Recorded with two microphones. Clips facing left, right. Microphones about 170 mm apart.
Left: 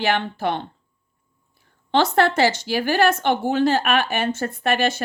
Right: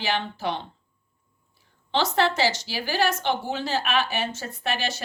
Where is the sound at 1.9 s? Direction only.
55° left (ahead or behind).